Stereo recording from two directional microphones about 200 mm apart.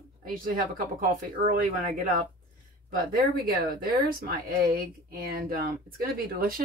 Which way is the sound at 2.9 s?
45° right (ahead or behind).